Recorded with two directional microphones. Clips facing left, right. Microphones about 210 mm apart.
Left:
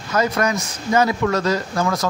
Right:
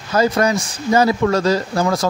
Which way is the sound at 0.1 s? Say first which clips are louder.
Right 4 dB; 30° right (ahead or behind).